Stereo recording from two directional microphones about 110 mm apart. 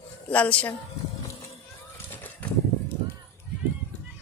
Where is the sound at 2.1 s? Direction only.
15° left (ahead or behind).